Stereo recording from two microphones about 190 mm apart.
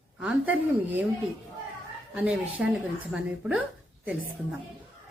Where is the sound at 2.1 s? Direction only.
5° right (ahead or behind).